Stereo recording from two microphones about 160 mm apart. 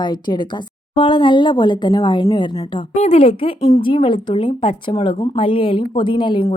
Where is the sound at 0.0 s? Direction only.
30° left (ahead or behind).